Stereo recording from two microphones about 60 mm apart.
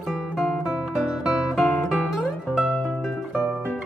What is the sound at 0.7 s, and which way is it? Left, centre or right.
Guitar, centre.